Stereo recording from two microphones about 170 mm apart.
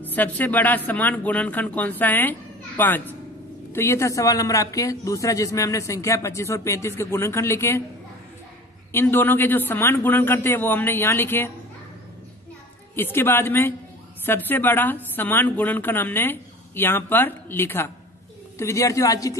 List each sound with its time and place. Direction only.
0.0 s speech: 10° left (ahead or behind)
8.9 s speech: 10° left (ahead or behind)
12.9 s a man's voice: 15° left (ahead or behind)